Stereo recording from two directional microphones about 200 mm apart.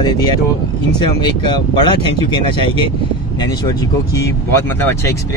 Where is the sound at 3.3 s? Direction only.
20° left (ahead or behind).